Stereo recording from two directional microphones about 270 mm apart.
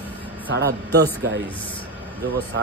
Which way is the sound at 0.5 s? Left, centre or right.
Right.